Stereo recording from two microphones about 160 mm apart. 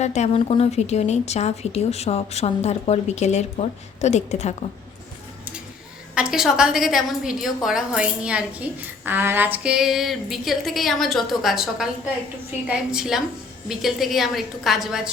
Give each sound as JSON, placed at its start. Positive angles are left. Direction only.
{"t": 0.0, "sound": "a woman's voice", "side_deg": 45}
{"t": 6.1, "sound": "a woman's voice", "side_deg": -5}